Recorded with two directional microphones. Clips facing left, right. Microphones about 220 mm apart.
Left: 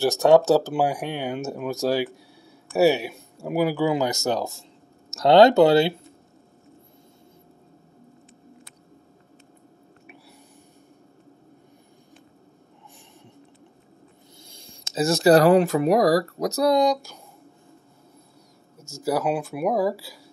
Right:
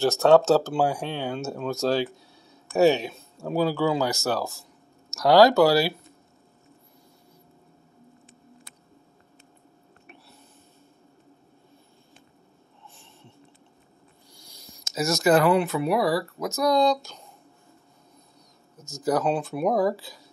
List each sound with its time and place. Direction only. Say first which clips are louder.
0.0 s speech: left 1 dB; 15° left (ahead or behind)
14.3 s speech: even; 25° left (ahead or behind)
16.7 s speech: left 1 dB; 15° left (ahead or behind)
19.0 s speech: even; 10° left (ahead or behind)